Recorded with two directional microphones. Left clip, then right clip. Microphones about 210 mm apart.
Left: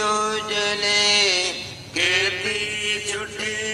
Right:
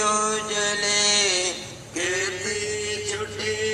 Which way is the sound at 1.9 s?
25° left (ahead or behind).